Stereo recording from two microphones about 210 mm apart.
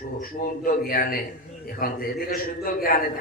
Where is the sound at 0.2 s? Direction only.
45° left (ahead or behind).